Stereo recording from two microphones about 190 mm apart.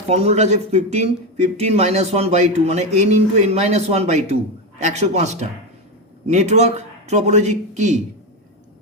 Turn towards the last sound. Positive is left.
turn(degrees=-40)  # may be behind; listen again after turning